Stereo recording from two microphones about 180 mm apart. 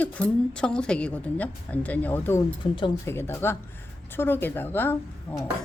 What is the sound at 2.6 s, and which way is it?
Speech, 30° left (ahead or behind).